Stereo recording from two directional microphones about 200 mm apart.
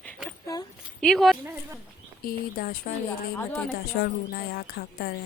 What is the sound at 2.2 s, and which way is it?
Speech, 45° left (ahead or behind).